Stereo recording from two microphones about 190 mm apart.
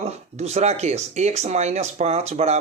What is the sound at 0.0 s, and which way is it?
Speech, 35° right (ahead or behind).